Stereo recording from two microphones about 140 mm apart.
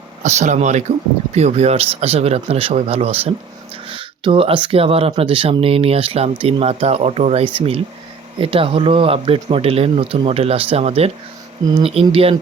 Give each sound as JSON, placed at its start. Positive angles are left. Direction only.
{"t": 0.2, "sound": "speech", "side_deg": -55}